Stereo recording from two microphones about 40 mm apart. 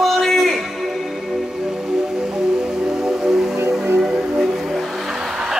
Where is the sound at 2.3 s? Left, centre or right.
Centre.